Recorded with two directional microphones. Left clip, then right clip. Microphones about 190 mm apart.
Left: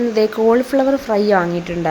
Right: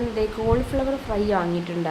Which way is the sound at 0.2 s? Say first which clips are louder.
Left 9 dB; 35° left (ahead or behind).